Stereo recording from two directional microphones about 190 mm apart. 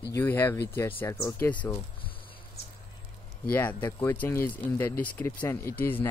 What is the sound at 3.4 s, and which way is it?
Speech, 10° left (ahead or behind).